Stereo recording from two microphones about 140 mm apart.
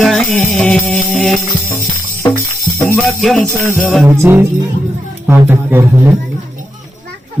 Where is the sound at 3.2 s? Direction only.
Centre (ahead or behind).